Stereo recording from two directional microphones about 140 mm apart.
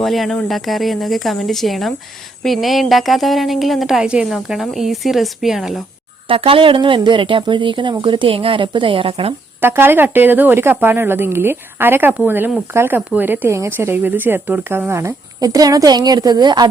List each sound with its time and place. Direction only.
0.0 s speech: centre (ahead or behind)
6.2 s speech: 40° right (ahead or behind)
9.6 s speech: 15° right (ahead or behind)